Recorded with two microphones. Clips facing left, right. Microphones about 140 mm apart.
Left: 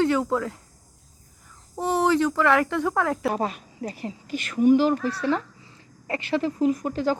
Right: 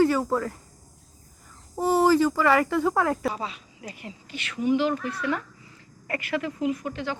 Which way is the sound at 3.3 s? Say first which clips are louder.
Left 7 dB; 50° left (ahead or behind).